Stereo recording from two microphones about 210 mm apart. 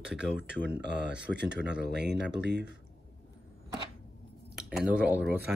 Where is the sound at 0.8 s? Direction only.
55° right (ahead or behind).